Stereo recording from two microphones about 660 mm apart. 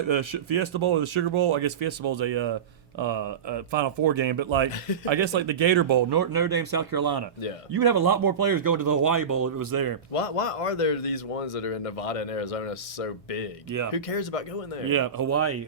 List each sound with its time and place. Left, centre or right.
0.1 s speech: right
10.1 s speech: left
14.8 s speech: right